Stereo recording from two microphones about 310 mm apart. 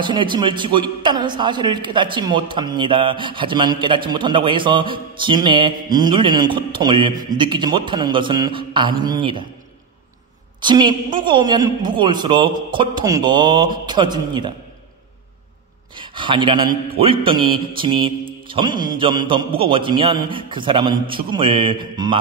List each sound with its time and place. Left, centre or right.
0.0 s a man's voice: centre
10.6 s a man's voice: centre
16.0 s a man's voice: centre